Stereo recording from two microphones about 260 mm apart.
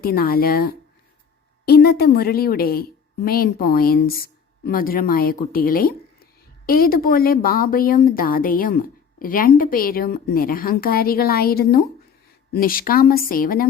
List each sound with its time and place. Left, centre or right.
0.0 s a woman's voice: left